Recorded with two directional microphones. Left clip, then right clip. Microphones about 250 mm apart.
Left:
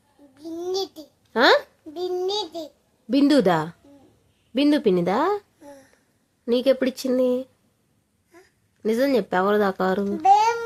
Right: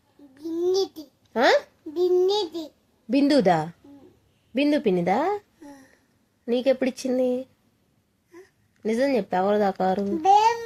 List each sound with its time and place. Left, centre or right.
0.3 s babbling: centre
3.1 s a woman's voice: centre
8.8 s speech: centre
10.2 s music: centre